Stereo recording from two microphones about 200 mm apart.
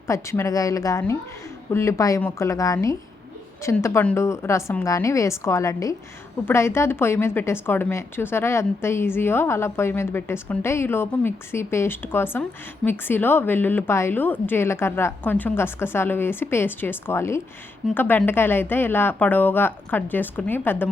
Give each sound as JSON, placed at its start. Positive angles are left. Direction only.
{"t": 0.1, "sound": "a woman's voice", "side_deg": 15}